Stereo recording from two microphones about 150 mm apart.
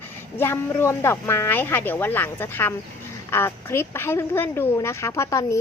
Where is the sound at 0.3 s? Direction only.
15° left (ahead or behind).